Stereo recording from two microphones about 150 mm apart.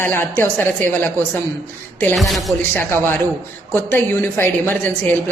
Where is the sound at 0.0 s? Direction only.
15° left (ahead or behind).